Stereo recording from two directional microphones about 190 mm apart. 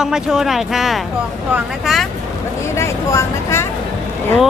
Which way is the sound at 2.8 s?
15° left (ahead or behind).